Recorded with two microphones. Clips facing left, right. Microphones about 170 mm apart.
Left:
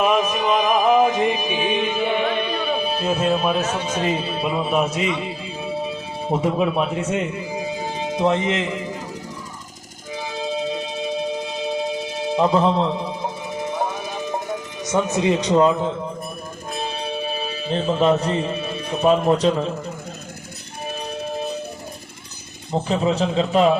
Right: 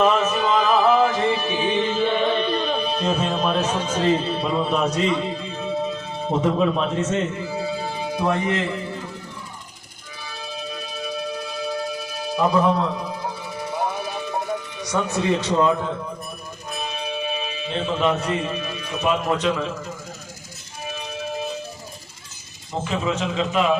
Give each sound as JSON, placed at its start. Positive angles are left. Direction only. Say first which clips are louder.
{"t": 0.0, "sound": "music", "louder": "even", "side_deg": 15}
{"t": 10.2, "sound": "music", "louder": "left 9 dB", "side_deg": 20}
{"t": 14.8, "sound": "speech", "louder": "left 4 dB", "side_deg": 20}
{"t": 16.7, "sound": "music", "louder": "left 2 dB", "side_deg": 30}
{"t": 22.8, "sound": "a man's voice", "louder": "left 4 dB", "side_deg": 35}